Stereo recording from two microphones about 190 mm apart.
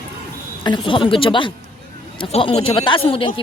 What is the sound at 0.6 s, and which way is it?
Speech, 25° left (ahead or behind).